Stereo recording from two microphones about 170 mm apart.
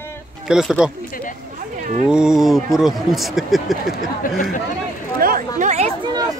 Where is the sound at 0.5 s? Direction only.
5° right (ahead or behind).